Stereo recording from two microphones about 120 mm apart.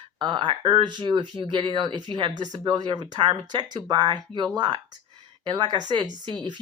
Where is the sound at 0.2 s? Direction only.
40° right (ahead or behind).